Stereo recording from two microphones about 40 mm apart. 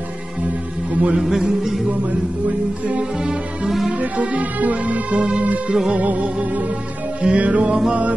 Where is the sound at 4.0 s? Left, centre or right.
Right.